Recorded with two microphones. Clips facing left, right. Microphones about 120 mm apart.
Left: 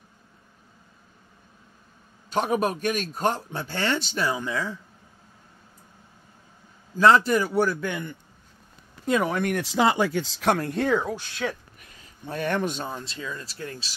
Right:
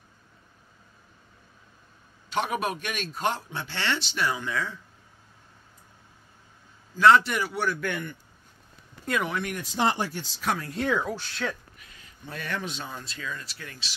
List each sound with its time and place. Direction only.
2.2 s a man's voice: 40° left (ahead or behind)
7.0 s a man's voice: 35° left (ahead or behind)
7.8 s speech: 20° left (ahead or behind)
9.2 s speech: 45° left (ahead or behind)
9.8 s speech: 90° left
10.2 s speech: 80° left; by 10.9 s 60° left (ahead or behind)
10.9 s speech: 25° left (ahead or behind)
11.8 s speech: 45° left (ahead or behind)
12.9 s speech: 25° left (ahead or behind)